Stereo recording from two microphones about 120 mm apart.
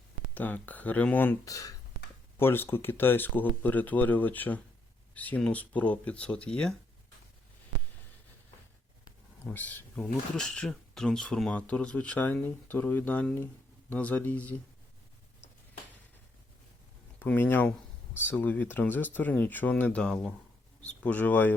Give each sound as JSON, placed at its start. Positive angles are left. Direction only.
{"t": 0.3, "sound": "speech", "side_deg": 15}
{"t": 1.5, "sound": "speech", "side_deg": 30}
{"t": 2.4, "sound": "speech", "side_deg": 20}
{"t": 9.4, "sound": "speech", "side_deg": 15}
{"t": 17.2, "sound": "speech", "side_deg": 15}